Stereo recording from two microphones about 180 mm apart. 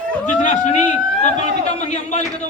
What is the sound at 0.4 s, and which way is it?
Speech, 45° left (ahead or behind).